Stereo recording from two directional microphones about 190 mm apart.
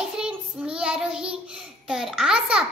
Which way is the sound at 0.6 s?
5° right (ahead or behind).